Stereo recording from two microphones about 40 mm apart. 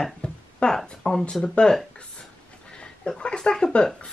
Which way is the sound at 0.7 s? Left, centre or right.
Centre.